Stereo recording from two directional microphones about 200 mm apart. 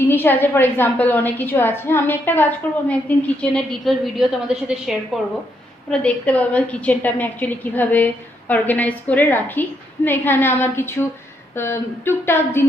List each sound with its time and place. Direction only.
0.1 s a woman's voice: 10° left (ahead or behind)